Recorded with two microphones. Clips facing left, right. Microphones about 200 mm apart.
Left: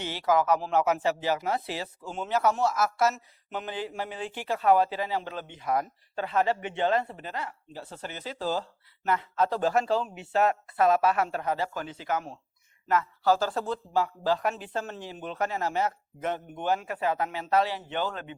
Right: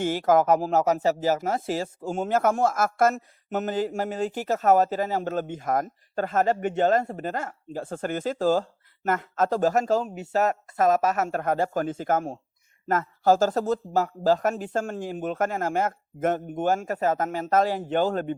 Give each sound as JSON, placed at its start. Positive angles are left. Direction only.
{"t": 0.0, "sound": "speech", "side_deg": -50}